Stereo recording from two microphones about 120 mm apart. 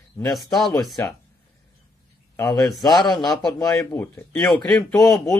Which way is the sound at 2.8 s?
35° left (ahead or behind).